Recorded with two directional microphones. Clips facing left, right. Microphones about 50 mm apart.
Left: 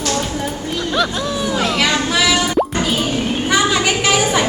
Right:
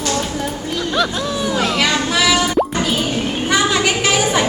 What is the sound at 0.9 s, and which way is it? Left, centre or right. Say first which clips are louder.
Plop: even; centre.